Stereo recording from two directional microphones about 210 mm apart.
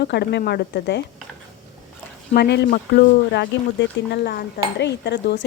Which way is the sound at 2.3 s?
50° left (ahead or behind).